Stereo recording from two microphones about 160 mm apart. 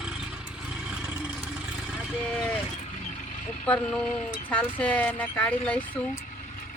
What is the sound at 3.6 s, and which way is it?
Speech, 10° left (ahead or behind).